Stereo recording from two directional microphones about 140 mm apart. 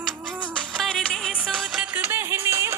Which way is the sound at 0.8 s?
5° left (ahead or behind).